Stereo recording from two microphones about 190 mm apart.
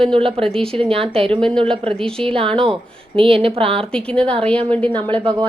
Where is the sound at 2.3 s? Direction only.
30° right (ahead or behind).